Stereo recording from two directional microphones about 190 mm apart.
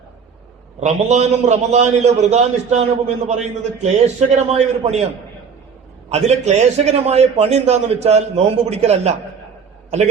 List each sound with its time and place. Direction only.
0.8 s a man's voice: 35° right (ahead or behind)
6.1 s a man's voice: 35° right (ahead or behind)